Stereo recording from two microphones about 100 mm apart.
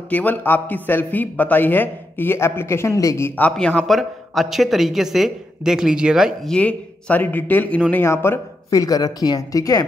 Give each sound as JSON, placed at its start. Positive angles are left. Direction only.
{"t": 0.1, "sound": "a man's voice", "side_deg": 15}
{"t": 3.5, "sound": "speech", "side_deg": 5}
{"t": 6.5, "sound": "speech", "side_deg": 15}
{"t": 8.0, "sound": "speech", "side_deg": 25}
{"t": 8.7, "sound": "speech", "side_deg": 40}